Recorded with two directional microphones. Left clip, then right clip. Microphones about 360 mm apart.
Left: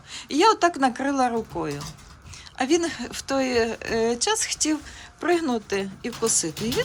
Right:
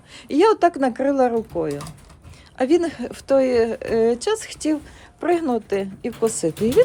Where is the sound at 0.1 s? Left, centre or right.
Centre.